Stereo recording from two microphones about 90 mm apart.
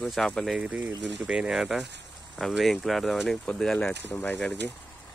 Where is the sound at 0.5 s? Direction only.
15° right (ahead or behind); by 3.9 s 5° left (ahead or behind).